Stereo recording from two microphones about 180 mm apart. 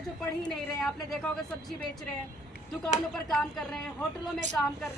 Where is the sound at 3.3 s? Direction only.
5° left (ahead or behind).